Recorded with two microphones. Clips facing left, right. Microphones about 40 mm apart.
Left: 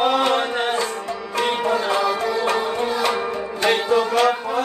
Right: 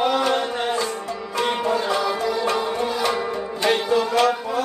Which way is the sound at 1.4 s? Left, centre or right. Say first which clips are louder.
Left 1 dB; left.